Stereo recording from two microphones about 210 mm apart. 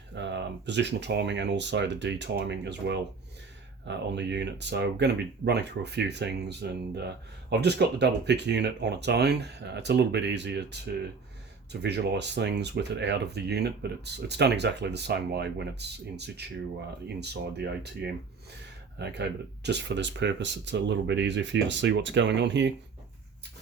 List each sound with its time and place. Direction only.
0.1 s speech: 55° right (ahead or behind)